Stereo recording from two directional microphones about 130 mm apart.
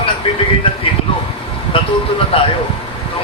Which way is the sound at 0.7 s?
45° left (ahead or behind).